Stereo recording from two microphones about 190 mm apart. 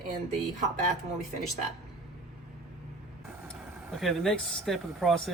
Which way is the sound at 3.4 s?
Centre (ahead or behind).